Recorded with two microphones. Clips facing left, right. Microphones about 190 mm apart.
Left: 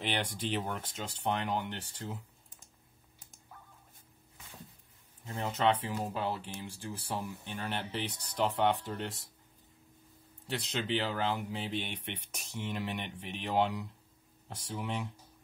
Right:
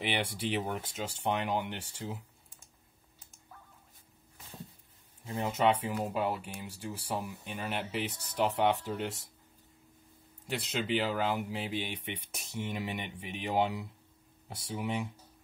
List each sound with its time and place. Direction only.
0.0 s speech: 10° right (ahead or behind)
5.4 s speech: 10° right (ahead or behind)
10.4 s speech: 10° right (ahead or behind)